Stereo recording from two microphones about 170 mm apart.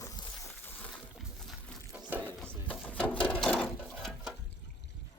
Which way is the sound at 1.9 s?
10° right (ahead or behind).